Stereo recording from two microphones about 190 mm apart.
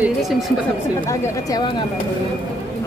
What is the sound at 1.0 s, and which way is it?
Speech, 15° left (ahead or behind).